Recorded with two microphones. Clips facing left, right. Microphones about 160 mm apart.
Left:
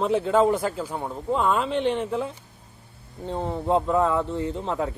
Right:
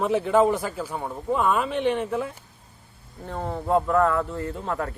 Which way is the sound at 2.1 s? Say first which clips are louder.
Even; 20° left (ahead or behind).